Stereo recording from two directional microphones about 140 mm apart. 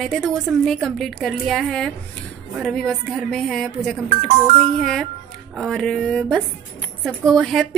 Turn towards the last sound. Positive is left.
turn(degrees=0)  # may be behind; listen again after turning